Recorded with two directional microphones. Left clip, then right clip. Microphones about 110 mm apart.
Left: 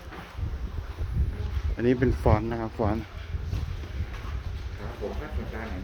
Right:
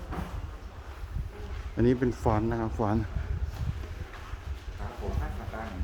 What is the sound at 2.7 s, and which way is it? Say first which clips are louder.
Speech: left 3 dB; 30° right (ahead or behind).